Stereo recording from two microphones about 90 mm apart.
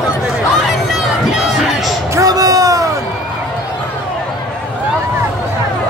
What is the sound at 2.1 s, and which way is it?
Music, 40° right (ahead or behind).